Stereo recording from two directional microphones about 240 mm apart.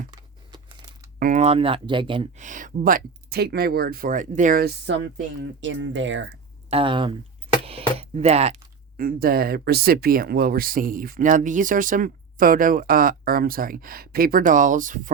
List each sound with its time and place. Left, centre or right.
1.2 s speech: right
5.4 s speech: right
6.7 s speech: right